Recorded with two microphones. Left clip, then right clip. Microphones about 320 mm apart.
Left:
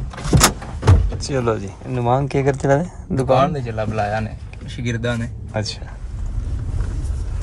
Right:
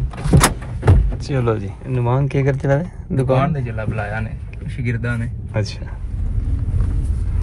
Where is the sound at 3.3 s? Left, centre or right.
Left.